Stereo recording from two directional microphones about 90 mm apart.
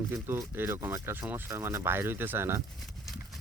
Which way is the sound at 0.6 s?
25° right (ahead or behind).